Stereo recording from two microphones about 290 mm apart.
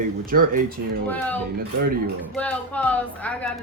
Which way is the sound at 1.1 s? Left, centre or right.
Centre.